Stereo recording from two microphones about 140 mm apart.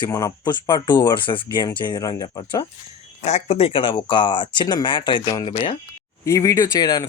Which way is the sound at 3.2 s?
50° left (ahead or behind).